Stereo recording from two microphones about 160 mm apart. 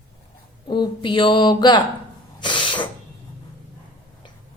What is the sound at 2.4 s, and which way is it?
Snort, 30° left (ahead or behind).